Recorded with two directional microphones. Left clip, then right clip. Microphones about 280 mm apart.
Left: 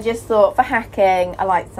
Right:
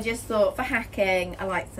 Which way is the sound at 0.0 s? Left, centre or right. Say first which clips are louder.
Left 9 dB; left.